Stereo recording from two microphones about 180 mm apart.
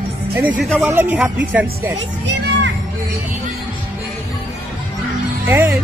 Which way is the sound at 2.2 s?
75° right (ahead or behind).